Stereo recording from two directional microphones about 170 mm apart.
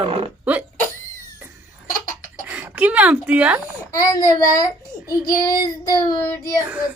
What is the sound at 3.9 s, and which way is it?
Child singing, 20° left (ahead or behind).